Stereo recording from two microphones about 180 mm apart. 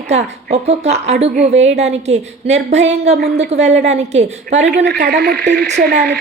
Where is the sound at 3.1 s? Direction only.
65° right (ahead or behind).